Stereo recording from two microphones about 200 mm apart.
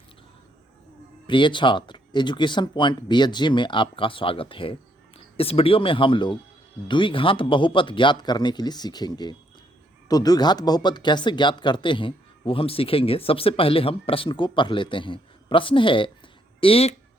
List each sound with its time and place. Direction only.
1.3 s speech: 25° left (ahead or behind)